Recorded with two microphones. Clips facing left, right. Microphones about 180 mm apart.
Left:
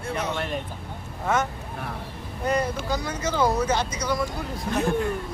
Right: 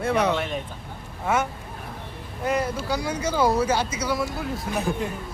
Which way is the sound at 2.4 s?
10° right (ahead or behind).